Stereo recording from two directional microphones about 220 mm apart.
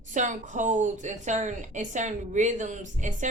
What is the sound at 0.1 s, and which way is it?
A woman's voice, 35° right (ahead or behind).